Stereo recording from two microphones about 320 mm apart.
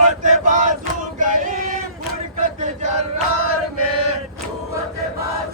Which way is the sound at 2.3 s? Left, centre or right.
Right.